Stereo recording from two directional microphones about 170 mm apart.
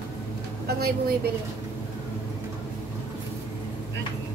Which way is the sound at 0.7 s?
65° right (ahead or behind).